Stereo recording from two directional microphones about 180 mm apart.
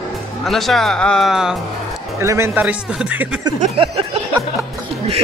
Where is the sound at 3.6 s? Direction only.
30° right (ahead or behind).